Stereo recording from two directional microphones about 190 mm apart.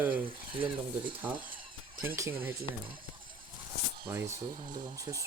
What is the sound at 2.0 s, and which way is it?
Speech, 15° right (ahead or behind).